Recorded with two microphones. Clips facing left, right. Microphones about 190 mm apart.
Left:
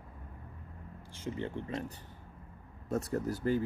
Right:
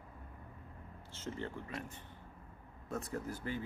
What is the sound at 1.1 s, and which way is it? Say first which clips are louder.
Speech: left 5 dB; 15° left (ahead or behind).